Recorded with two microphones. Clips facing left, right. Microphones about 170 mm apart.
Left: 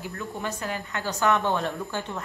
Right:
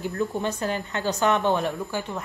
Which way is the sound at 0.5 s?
35° right (ahead or behind).